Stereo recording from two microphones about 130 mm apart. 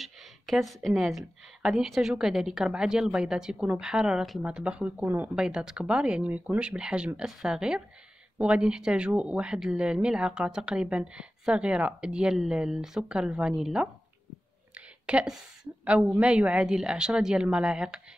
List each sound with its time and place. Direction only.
0.0 s a woman's voice: centre (ahead or behind)
14.7 s a sound: 10° right (ahead or behind)
15.8 s a woman's voice: 5° right (ahead or behind)